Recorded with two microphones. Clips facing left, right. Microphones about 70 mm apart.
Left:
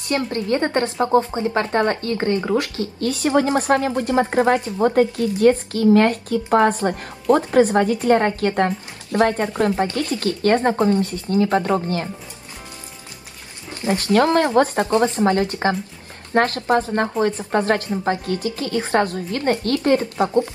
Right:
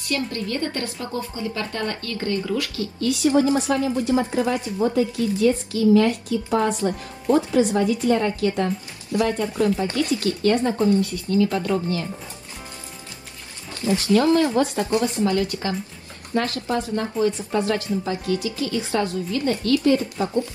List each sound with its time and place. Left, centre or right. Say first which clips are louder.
0.1 s a woman's voice: left 5 dB; left
3.3 s a woman's voice: left 2 dB; left
4.8 s a woman's voice: left 4 dB; left
10.9 s a woman's voice: left 1 dB; left
14.1 s a woman's voice: left 2 dB; left
14.6 s a woman's voice: left 4 dB; left